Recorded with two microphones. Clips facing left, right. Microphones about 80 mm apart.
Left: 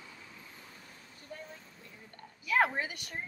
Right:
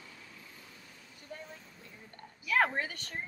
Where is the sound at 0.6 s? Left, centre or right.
Left.